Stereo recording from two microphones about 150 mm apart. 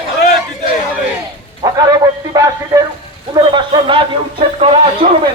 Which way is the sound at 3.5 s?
35° right (ahead or behind).